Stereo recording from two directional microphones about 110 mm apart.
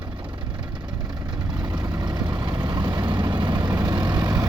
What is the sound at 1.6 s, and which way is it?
Vehicle, 40° right (ahead or behind).